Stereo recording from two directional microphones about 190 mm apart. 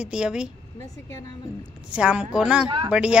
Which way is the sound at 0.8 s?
15° left (ahead or behind).